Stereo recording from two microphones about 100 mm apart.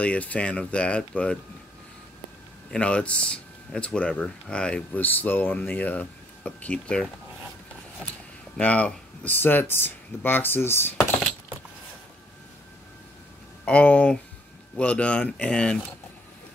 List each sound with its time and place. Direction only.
0.0 s speech: 15° left (ahead or behind)
2.7 s speech: 10° left (ahead or behind)
8.5 s speech: 15° left (ahead or behind)
13.7 s speech: 10° left (ahead or behind)